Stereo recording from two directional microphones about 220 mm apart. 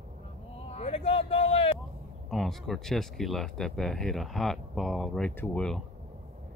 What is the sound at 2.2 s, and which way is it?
Speech, centre (ahead or behind).